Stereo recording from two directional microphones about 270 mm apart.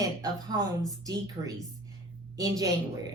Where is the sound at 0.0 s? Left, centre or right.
Centre.